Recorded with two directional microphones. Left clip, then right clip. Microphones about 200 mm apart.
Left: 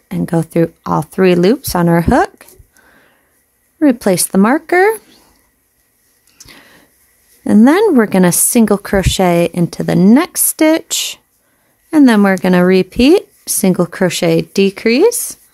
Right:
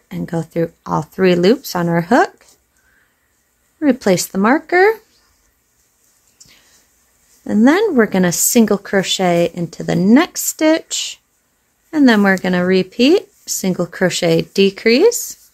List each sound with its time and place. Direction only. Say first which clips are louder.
0.1 s a woman's voice: left 6 dB; 35° left (ahead or behind)
3.8 s a woman's voice: left 3 dB; 35° left (ahead or behind)
7.4 s a woman's voice: left 4 dB; 35° left (ahead or behind)